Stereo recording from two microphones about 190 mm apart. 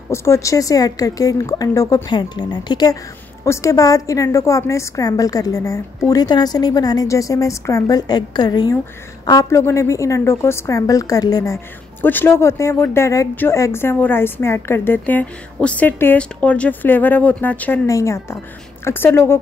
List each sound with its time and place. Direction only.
0.1 s speech: 15° left (ahead or behind)